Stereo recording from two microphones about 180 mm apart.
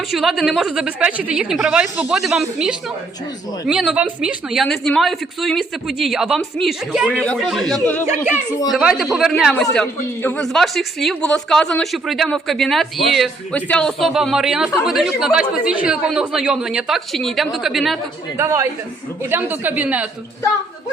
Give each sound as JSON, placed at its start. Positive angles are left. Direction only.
{"t": 0.1, "sound": "a woman's voice", "side_deg": 0}
{"t": 18.3, "sound": "a woman's voice", "side_deg": -15}